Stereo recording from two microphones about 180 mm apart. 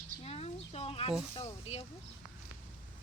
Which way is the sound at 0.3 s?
35° left (ahead or behind).